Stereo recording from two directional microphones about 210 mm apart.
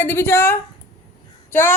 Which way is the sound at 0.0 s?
10° left (ahead or behind).